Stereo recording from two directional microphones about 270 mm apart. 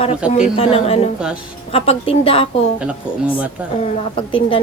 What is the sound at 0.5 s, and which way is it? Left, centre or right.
A woman's voice, left.